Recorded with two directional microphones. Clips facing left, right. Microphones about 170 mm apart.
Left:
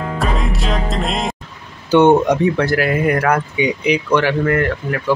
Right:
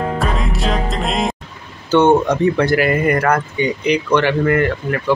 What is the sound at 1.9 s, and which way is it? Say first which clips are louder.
Speech: left 1 dB; 15° left (ahead or behind).